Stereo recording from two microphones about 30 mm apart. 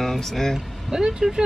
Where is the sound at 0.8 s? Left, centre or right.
Centre.